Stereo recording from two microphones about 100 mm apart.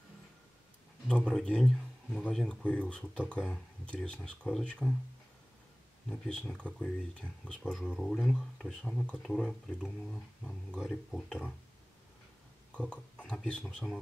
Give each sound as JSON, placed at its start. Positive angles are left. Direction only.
{"t": 1.0, "sound": "speech", "side_deg": 10}
{"t": 6.0, "sound": "speech", "side_deg": 10}
{"t": 12.7, "sound": "a sound", "side_deg": 10}
{"t": 13.5, "sound": "speech", "side_deg": 10}